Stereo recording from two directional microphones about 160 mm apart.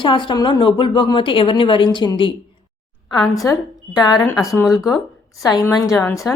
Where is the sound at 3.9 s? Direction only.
25° left (ahead or behind).